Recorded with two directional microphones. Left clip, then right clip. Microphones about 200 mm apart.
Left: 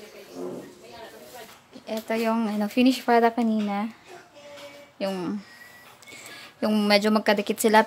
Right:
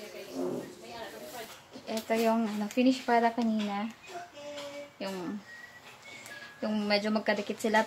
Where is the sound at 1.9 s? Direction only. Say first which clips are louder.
Left 2 dB; 50° left (ahead or behind).